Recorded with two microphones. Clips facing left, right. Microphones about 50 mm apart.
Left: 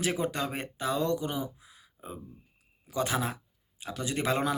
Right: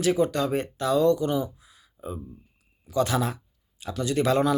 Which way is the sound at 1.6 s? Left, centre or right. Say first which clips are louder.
Right 5 dB; left.